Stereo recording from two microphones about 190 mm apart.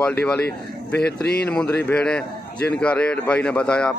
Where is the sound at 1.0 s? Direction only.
60° left (ahead or behind).